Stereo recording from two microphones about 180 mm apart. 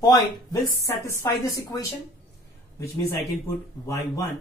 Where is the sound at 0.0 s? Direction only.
20° left (ahead or behind).